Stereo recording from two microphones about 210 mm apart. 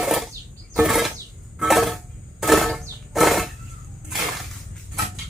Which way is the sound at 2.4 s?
Centre (ahead or behind).